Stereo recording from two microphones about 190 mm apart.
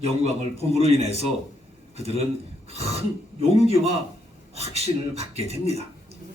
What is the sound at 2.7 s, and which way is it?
Throat clearing, 30° right (ahead or behind).